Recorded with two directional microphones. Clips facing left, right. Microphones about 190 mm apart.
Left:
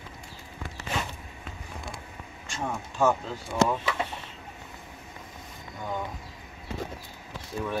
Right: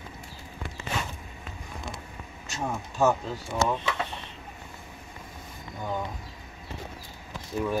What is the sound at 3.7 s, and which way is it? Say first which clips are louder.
Speech: even; 10° left (ahead or behind).